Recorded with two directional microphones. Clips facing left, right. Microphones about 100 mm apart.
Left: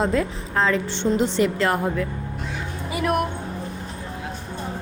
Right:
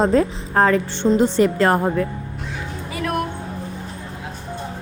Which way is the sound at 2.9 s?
15° left (ahead or behind).